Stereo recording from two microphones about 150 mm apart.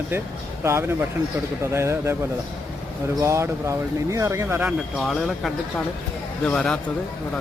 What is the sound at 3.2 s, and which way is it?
Speech, 20° right (ahead or behind).